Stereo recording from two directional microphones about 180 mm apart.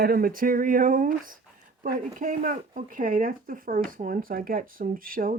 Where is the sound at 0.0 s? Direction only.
55° right (ahead or behind).